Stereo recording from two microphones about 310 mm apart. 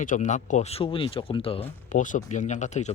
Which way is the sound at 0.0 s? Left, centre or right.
Left.